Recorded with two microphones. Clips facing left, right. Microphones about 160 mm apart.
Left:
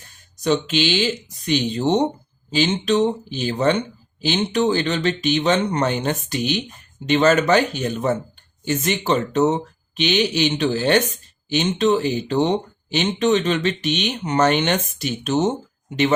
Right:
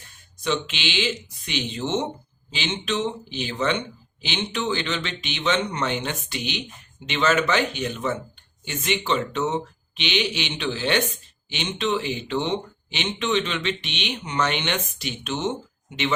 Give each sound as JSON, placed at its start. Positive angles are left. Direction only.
{"t": 0.4, "sound": "speech", "side_deg": 40}